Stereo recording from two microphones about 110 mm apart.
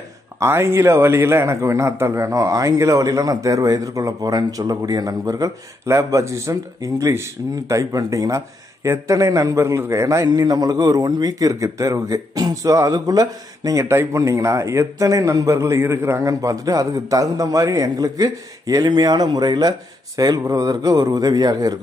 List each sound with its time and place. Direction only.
0.4 s a man's voice: 25° right (ahead or behind)